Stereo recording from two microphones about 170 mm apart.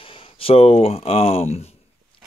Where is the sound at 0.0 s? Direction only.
30° left (ahead or behind).